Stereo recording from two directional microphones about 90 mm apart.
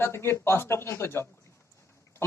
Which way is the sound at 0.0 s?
30° left (ahead or behind).